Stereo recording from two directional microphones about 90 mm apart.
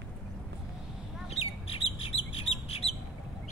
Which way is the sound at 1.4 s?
90° left.